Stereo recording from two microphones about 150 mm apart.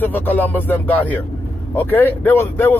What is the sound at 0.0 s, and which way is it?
Speech, 10° left (ahead or behind).